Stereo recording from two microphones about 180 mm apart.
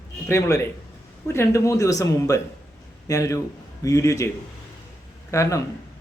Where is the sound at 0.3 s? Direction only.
15° left (ahead or behind).